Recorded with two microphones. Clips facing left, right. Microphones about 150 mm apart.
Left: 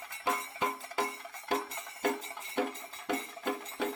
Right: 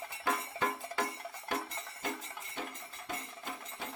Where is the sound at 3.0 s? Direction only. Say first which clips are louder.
Left 9 dB; 65° left (ahead or behind).